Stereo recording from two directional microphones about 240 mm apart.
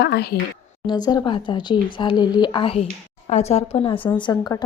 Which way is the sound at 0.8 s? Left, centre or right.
Centre.